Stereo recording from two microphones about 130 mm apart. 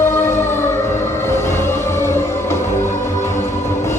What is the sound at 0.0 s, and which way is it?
Music, 20° left (ahead or behind).